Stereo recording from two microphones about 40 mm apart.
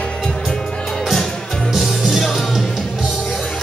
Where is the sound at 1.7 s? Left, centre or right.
Centre.